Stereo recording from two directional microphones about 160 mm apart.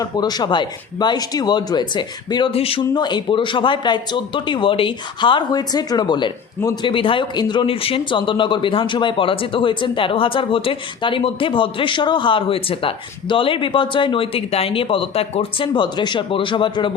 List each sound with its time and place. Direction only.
0.0 s speech: 25° left (ahead or behind)